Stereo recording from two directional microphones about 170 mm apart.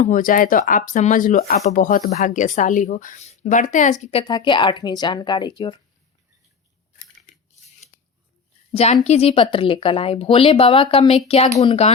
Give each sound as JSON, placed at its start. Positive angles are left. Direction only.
{"t": 0.0, "sound": "speech", "side_deg": 50}
{"t": 4.2, "sound": "speech", "side_deg": 25}
{"t": 8.7, "sound": "a woman's voice", "side_deg": 40}